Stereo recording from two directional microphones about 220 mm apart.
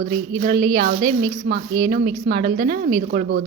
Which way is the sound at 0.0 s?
40° right (ahead or behind).